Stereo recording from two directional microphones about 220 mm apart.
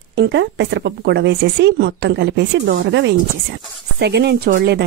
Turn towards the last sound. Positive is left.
turn(degrees=-45)  # may be behind; listen again after turning